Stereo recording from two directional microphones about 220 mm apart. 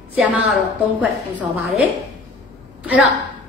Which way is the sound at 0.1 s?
5° right (ahead or behind).